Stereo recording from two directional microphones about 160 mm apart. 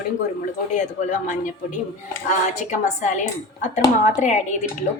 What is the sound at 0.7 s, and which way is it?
A woman's voice, 50° left (ahead or behind).